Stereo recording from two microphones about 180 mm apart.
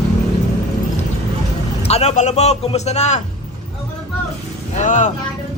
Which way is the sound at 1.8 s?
35° left (ahead or behind).